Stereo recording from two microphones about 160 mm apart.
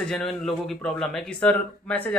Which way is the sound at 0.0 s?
5° left (ahead or behind).